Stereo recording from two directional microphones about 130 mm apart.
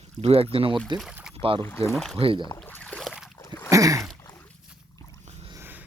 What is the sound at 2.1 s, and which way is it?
Speech, 45° right (ahead or behind).